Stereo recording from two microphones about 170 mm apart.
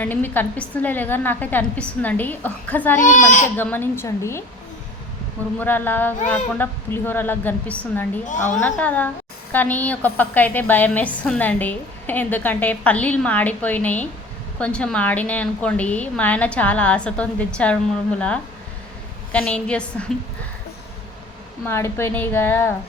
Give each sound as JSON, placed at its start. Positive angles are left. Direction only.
{"t": 0.0, "sound": "a woman's voice", "side_deg": 10}
{"t": 3.0, "sound": "speech", "side_deg": 50}
{"t": 3.6, "sound": "a woman's voice", "side_deg": 10}
{"t": 5.5, "sound": "a woman's voice", "side_deg": 10}
{"t": 8.3, "sound": "speech", "side_deg": 45}
{"t": 8.5, "sound": "a woman's voice", "side_deg": 10}
{"t": 19.3, "sound": "a woman's voice", "side_deg": 10}
{"t": 21.7, "sound": "a woman's voice", "side_deg": 15}